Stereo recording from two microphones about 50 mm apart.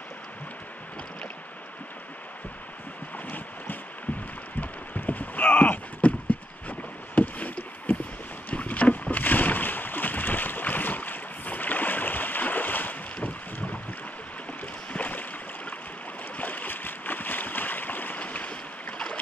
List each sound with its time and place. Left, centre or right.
3.3 s boat: left
4.6 s a sound: left
6.7 s boat: left
14.9 s boat: left
16.3 s boat: left